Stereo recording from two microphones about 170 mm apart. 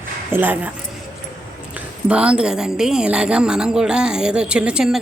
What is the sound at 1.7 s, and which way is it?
A woman's voice, 5° right (ahead or behind).